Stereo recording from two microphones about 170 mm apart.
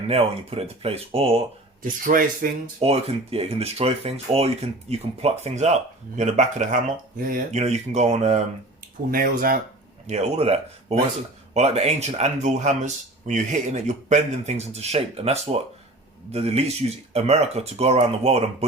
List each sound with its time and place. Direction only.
0.1 s speech: 35° right (ahead or behind)
1.8 s speech: 55° right (ahead or behind)
2.8 s speech: 35° right (ahead or behind); by 7.6 s 55° right (ahead or behind)
7.6 s speech: 40° right (ahead or behind)
9.0 s speech: 55° right (ahead or behind)
10.1 s speech: 40° right (ahead or behind)